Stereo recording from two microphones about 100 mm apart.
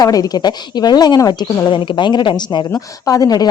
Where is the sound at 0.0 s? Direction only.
40° left (ahead or behind).